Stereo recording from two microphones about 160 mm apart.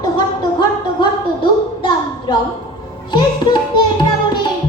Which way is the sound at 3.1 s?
30° left (ahead or behind).